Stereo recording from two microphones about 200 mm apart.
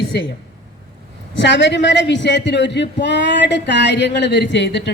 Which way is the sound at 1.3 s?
65° left (ahead or behind).